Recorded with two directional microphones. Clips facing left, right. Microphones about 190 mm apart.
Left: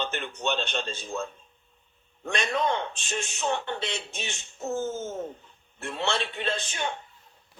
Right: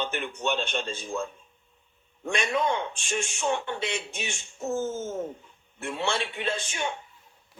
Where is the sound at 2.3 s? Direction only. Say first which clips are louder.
Right 1 dB; 10° right (ahead or behind).